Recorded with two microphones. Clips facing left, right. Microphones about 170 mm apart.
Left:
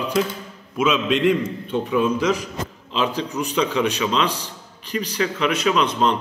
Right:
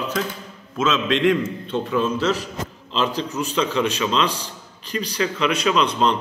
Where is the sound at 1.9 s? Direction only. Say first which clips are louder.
Left 2 dB; 15° left (ahead or behind).